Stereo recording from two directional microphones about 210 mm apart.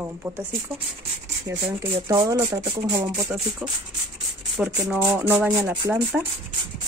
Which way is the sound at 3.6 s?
5° right (ahead or behind).